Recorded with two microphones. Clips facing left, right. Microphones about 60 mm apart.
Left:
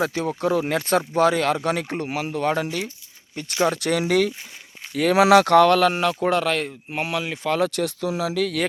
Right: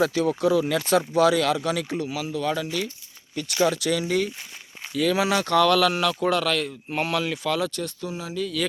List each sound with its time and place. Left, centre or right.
0.0 s speech: left
3.4 s speech: left
3.7 s speech: left
4.0 s speech: left
5.5 s speech: left
6.9 s speech: centre
7.7 s speech: left